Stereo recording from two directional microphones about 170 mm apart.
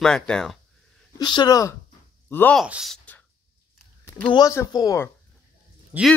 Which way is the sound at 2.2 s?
10° left (ahead or behind).